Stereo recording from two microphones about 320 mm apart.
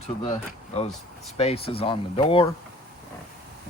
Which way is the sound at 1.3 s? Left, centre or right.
Centre.